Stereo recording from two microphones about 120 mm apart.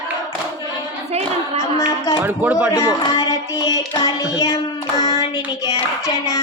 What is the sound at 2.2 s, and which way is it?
Speech, 15° right (ahead or behind).